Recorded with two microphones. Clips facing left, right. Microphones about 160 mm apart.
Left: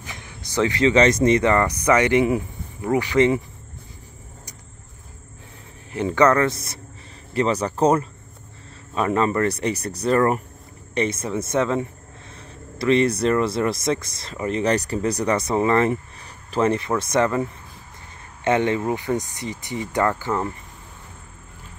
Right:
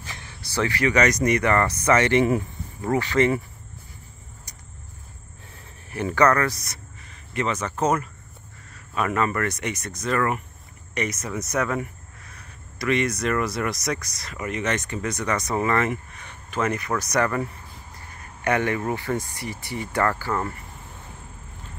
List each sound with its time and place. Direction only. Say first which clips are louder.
0.0 s speech: left 2 dB; 15° left (ahead or behind)
5.9 s speech: left 2 dB; 20° left (ahead or behind)